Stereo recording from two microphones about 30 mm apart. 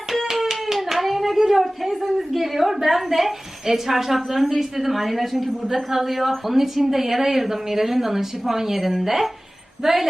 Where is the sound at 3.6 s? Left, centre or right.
Centre.